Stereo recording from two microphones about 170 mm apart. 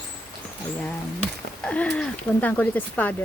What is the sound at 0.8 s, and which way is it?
Speech, 5° left (ahead or behind).